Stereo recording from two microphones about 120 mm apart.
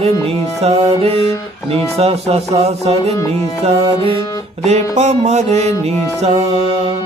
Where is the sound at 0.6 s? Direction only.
60° right (ahead or behind).